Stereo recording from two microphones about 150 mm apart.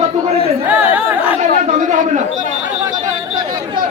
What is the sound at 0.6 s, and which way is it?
Chatter, 10° right (ahead or behind).